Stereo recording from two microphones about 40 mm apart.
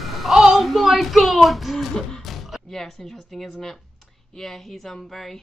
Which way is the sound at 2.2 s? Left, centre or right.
Centre.